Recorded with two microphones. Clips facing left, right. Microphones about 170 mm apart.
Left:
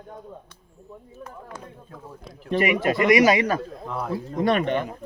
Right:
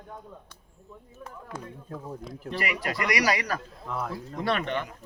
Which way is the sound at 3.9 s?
5° left (ahead or behind).